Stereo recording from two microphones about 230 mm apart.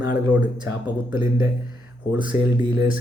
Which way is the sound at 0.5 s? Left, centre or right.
Centre.